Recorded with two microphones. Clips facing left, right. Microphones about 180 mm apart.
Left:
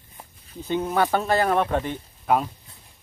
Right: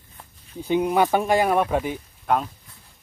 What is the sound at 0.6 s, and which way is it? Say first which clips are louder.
Speech: right 3 dB; 15° right (ahead or behind).